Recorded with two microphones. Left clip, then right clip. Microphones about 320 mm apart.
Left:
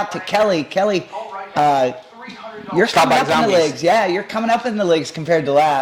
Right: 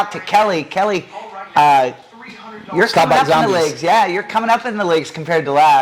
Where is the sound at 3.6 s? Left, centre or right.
Right.